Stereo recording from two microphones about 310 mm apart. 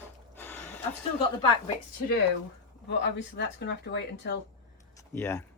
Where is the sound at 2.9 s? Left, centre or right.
Left.